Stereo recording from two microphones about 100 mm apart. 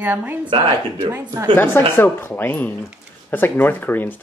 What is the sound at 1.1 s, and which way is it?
Speech, 25° right (ahead or behind).